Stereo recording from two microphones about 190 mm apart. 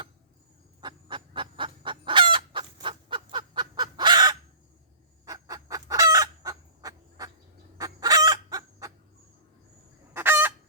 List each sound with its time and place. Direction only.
0.8 s chicken: 25° right (ahead or behind)
10.2 s chicken: 10° right (ahead or behind)